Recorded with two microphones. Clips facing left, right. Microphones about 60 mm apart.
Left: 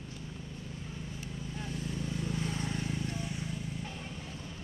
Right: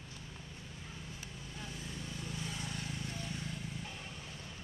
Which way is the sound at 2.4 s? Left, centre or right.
Left.